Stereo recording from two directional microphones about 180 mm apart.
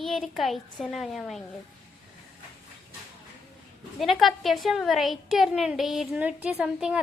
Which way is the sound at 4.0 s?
Centre (ahead or behind).